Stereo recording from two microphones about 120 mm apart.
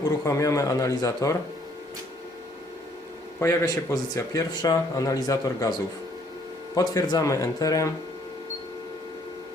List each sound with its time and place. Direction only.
0.0 s speech: 30° left (ahead or behind)
3.4 s speech: 25° left (ahead or behind)
6.7 s speech: 30° left (ahead or behind)